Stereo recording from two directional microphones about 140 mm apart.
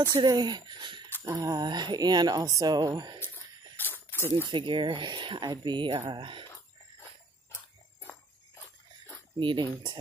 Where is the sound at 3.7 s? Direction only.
15° left (ahead or behind).